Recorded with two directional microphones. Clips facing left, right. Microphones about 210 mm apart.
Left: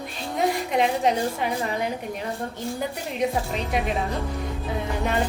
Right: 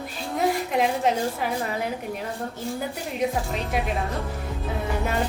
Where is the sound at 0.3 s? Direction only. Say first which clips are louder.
Even; 5° right (ahead or behind).